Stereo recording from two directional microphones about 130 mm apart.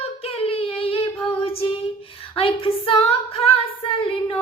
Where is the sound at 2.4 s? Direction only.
45° left (ahead or behind).